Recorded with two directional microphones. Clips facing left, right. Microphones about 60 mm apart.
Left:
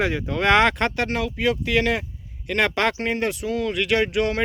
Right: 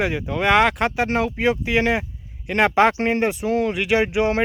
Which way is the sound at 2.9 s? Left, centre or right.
Right.